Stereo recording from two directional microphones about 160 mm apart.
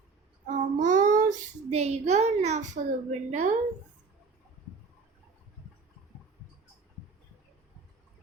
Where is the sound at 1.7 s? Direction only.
45° right (ahead or behind).